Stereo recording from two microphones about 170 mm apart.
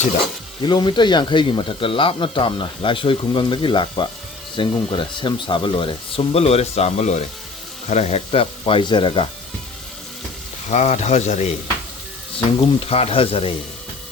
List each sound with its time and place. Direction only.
0.6 s speech: 25° left (ahead or behind)
10.7 s speech: 45° left (ahead or behind)
12.5 s speech: 35° left (ahead or behind)